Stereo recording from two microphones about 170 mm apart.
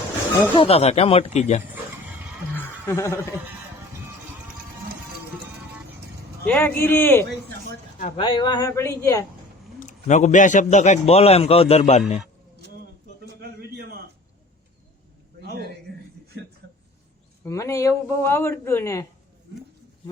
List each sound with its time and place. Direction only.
0.5 s a man's voice: 35° left (ahead or behind)
2.6 s chuckle: 15° left (ahead or behind)
6.5 s a man's voice: 10° left (ahead or behind)
8.1 s a man's voice: 30° left (ahead or behind)
9.8 s a man's voice: 45° left (ahead or behind)
13.7 s a sound: 65° right (ahead or behind)
15.4 s a sound: 70° right (ahead or behind)
17.4 s a man's voice: 15° left (ahead or behind)